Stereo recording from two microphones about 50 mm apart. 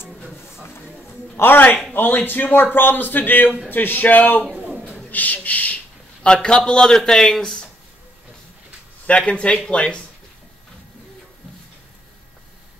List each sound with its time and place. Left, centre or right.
1.3 s a man's voice: left
4.6 s a sound: right
5.1 s a man's voice: left
6.2 s a man's voice: centre
9.0 s speech: left